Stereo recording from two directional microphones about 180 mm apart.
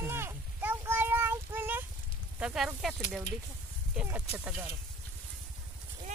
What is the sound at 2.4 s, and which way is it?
Speech, 5° right (ahead or behind).